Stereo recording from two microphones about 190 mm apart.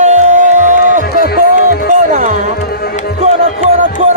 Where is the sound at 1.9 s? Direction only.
40° right (ahead or behind).